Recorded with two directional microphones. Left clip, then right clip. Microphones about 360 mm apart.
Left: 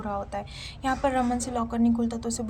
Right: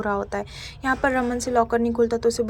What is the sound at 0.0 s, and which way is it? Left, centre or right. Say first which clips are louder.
A woman's voice: right 6 dB; centre.